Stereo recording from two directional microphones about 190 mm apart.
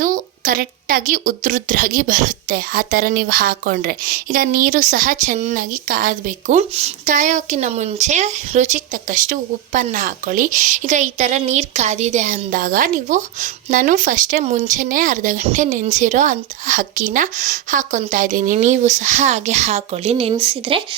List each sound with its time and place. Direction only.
0.0 s a woman's voice: 45° right (ahead or behind)
6.6 s speech: 35° right (ahead or behind)